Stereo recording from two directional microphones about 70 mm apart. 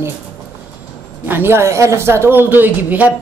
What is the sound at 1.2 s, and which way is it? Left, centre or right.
A woman's voice, right.